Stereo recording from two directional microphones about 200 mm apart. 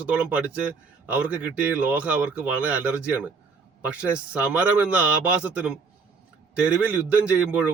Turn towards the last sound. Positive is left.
turn(degrees=-5)  # may be behind; listen again after turning